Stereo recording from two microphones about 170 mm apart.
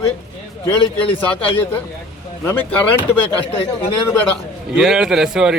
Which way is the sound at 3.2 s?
35° left (ahead or behind).